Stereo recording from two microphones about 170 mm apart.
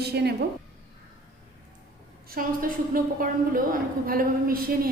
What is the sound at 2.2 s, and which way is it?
A woman's voice, 60° right (ahead or behind).